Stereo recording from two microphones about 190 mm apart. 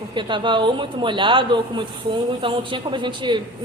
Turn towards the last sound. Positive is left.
turn(degrees=-25)  # may be behind; listen again after turning